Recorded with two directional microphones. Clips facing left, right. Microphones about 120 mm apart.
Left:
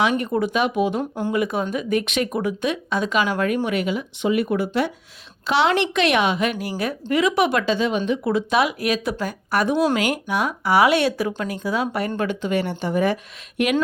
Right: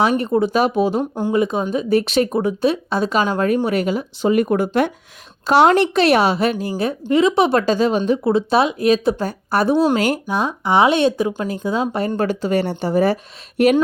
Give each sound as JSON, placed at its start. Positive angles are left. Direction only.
{"t": 0.0, "sound": "speech", "side_deg": -35}
{"t": 7.6, "sound": "speech", "side_deg": -40}